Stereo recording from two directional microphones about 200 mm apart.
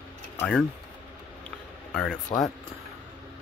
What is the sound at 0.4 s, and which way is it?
Speech, 5° left (ahead or behind).